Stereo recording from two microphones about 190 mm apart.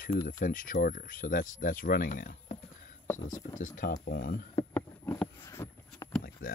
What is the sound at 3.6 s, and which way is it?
Speech, 45° left (ahead or behind).